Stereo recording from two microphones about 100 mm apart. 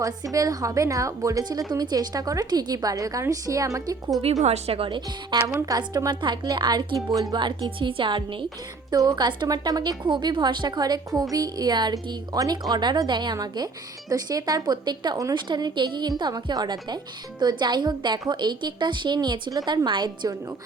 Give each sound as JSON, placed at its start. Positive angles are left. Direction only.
{"t": 0.0, "sound": "a woman's voice", "side_deg": -35}
{"t": 4.4, "sound": "a woman's voice", "side_deg": -90}
{"t": 5.5, "sound": "a woman's voice", "side_deg": -35}
{"t": 8.9, "sound": "a woman's voice", "side_deg": -40}